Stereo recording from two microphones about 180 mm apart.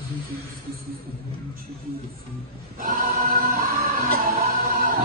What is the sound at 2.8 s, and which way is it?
Music, 50° right (ahead or behind).